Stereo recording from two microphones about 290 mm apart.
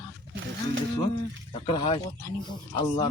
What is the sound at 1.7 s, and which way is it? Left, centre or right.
Speech, centre.